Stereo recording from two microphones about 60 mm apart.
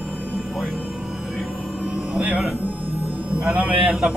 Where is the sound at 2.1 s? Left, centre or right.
Right.